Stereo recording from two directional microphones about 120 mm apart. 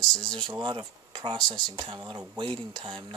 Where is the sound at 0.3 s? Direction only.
40° right (ahead or behind).